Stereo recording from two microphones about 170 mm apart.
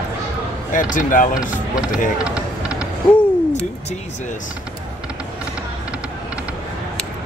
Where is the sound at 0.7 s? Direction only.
50° left (ahead or behind).